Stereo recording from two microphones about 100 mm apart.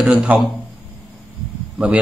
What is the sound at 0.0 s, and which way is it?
Speech, 10° right (ahead or behind).